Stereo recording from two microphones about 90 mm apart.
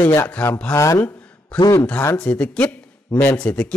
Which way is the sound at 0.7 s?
35° left (ahead or behind).